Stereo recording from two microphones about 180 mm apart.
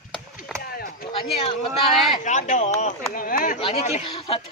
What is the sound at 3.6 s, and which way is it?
Speech, 35° left (ahead or behind).